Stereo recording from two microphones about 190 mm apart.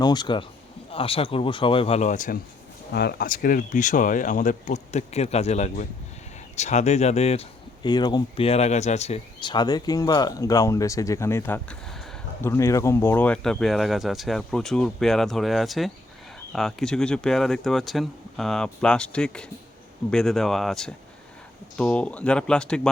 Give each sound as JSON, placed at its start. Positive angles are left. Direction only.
{"t": 0.0, "sound": "speech", "side_deg": 20}
{"t": 2.9, "sound": "speech", "side_deg": 60}
{"t": 7.9, "sound": "speech", "side_deg": 20}